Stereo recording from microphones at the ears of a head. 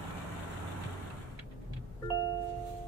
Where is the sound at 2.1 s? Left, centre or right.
Right.